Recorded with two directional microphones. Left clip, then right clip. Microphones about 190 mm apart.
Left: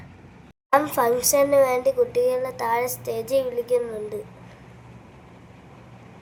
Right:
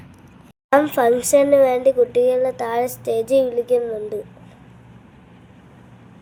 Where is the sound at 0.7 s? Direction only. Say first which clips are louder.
Right 4 dB; 15° right (ahead or behind).